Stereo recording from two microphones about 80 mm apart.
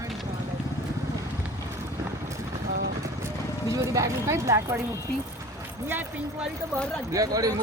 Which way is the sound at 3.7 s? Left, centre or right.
Right.